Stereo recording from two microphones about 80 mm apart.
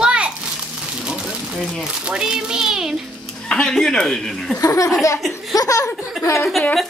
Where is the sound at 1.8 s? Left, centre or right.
Centre.